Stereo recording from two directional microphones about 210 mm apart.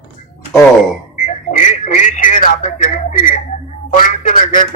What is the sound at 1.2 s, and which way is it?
Telephone, 35° left (ahead or behind).